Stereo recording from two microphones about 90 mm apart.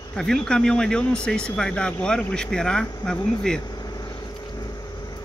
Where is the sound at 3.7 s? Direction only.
45° left (ahead or behind).